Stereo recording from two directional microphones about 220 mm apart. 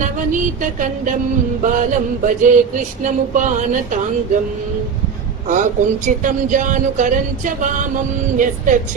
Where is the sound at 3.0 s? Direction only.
35° right (ahead or behind).